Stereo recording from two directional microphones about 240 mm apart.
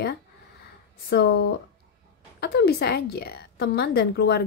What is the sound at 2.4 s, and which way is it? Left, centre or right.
A woman's voice, left.